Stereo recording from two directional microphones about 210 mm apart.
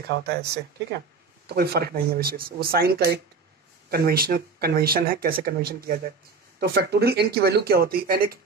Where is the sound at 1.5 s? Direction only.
50° right (ahead or behind).